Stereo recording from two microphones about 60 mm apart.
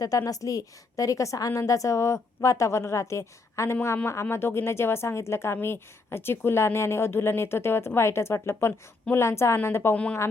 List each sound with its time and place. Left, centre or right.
0.3 s a woman's voice: left
9.9 s speech: left